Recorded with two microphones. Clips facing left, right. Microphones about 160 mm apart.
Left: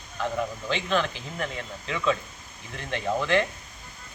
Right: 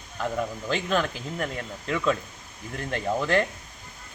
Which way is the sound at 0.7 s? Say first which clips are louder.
Right 1 dB; 40° right (ahead or behind).